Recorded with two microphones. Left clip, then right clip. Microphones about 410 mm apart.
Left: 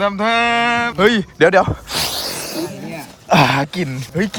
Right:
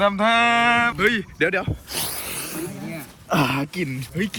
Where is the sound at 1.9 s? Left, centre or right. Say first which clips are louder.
Left 9 dB; left.